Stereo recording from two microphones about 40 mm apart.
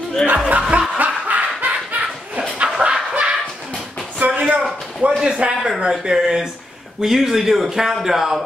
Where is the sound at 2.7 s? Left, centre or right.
Centre.